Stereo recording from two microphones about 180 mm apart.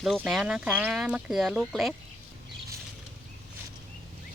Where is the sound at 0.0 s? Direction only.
Centre (ahead or behind).